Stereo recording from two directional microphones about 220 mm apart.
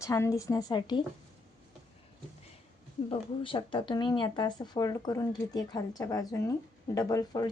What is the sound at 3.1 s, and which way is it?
Speech, 25° left (ahead or behind).